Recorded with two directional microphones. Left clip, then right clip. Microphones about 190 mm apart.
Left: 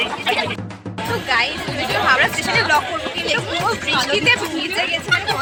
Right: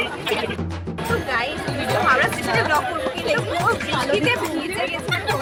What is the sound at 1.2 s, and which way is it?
Music, 5° right (ahead or behind).